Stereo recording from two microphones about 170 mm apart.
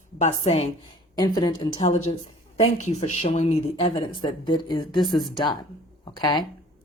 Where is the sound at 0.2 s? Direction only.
45° left (ahead or behind).